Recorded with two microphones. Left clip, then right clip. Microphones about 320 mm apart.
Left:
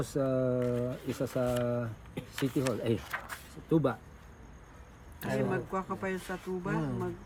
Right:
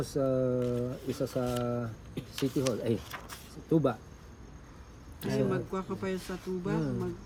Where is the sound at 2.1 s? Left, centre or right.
Centre.